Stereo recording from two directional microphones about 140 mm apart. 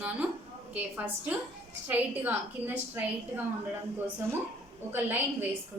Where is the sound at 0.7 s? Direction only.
10° right (ahead or behind).